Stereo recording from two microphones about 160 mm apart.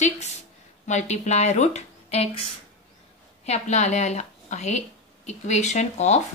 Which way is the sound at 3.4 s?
45° left (ahead or behind).